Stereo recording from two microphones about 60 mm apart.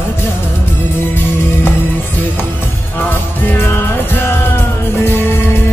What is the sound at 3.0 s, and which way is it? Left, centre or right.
Music, left.